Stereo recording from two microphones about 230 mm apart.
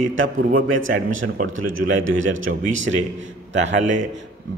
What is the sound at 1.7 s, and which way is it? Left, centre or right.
Speech, right.